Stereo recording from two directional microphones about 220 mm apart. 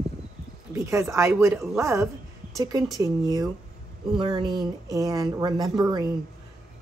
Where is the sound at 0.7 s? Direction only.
15° right (ahead or behind).